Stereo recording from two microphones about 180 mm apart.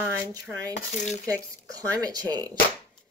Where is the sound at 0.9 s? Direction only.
40° left (ahead or behind).